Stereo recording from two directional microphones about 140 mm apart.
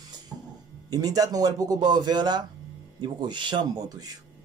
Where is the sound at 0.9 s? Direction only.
25° right (ahead or behind).